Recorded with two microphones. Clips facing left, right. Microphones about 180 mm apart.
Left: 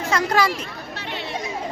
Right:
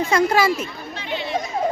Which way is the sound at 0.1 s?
10° right (ahead or behind).